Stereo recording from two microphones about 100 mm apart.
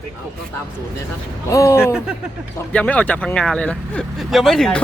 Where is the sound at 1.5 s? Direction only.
30° left (ahead or behind).